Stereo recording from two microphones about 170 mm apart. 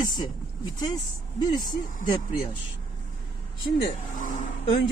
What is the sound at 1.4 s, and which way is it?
Speech, 25° left (ahead or behind).